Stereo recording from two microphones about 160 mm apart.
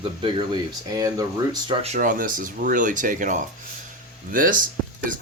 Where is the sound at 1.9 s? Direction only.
60° right (ahead or behind).